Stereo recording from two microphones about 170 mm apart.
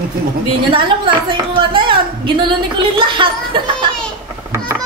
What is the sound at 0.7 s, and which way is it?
A woman's voice, 30° right (ahead or behind).